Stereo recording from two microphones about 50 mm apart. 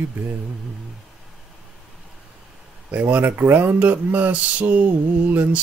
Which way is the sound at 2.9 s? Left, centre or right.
Right.